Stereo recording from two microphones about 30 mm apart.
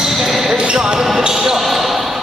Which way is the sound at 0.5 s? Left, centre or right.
Right.